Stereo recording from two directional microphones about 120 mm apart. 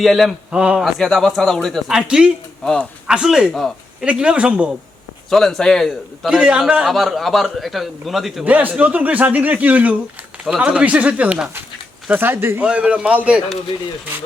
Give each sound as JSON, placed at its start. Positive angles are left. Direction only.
{"t": 0.0, "sound": "a man's voice", "side_deg": 0}
{"t": 5.3, "sound": "a man's voice", "side_deg": 5}
{"t": 8.4, "sound": "a man's voice", "side_deg": -15}